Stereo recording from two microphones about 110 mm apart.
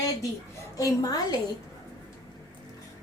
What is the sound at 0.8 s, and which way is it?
Speech, 35° left (ahead or behind).